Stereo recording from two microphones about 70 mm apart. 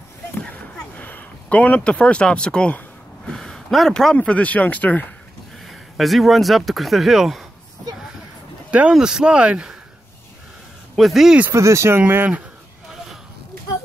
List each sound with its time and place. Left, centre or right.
0.4 s a sound: left; by 4.2 s centre
4.2 s speech: centre
5.7 s speech: centre
8.6 s a sound: centre
8.9 s speech: centre
11.0 s speech: centre
11.5 s speech: right